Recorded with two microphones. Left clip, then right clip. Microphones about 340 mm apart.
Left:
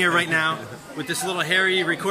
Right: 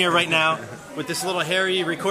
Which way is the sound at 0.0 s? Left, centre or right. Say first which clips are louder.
Right 1 dB; centre.